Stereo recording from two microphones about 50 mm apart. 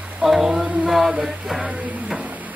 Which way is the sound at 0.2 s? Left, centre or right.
Centre.